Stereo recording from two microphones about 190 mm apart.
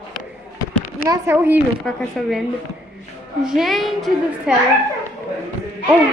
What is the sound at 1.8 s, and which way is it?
Speech, centre (ahead or behind).